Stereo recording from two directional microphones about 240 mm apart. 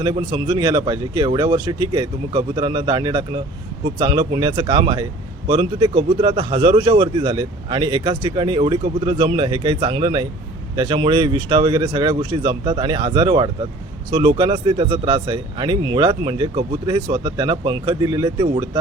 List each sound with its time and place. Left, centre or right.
0.0 s speech: right